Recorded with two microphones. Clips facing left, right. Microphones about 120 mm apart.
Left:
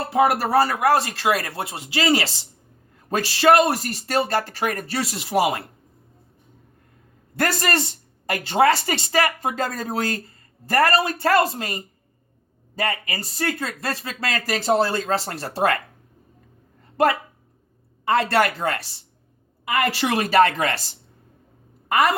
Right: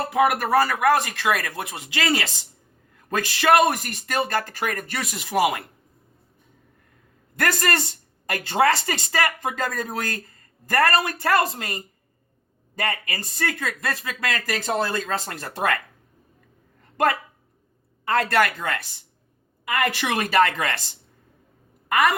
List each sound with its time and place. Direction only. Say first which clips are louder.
0.1 s speech: left 2 dB; 30° left (ahead or behind)
7.3 s speech: left 1 dB; 30° left (ahead or behind)
12.8 s speech: left 2 dB; 25° left (ahead or behind)
18.0 s speech: left 2 dB; 25° left (ahead or behind)
21.8 s a woman's voice: left 1 dB; 30° left (ahead or behind)